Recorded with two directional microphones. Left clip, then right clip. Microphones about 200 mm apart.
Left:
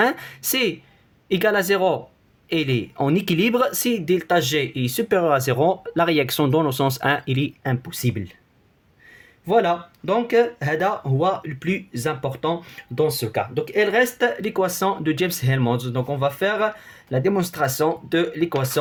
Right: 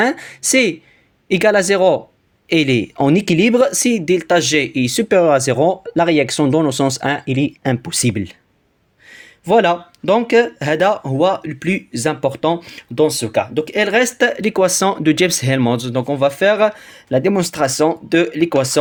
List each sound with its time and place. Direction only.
0.0 s speech: 20° right (ahead or behind)
7.6 s speech: 25° right (ahead or behind)
7.9 s speech: 45° right (ahead or behind)
13.1 s speech: 50° right (ahead or behind)